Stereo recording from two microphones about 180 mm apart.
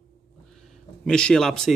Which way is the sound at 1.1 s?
5° left (ahead or behind).